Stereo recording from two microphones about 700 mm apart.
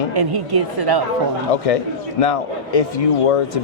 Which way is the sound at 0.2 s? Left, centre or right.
Right.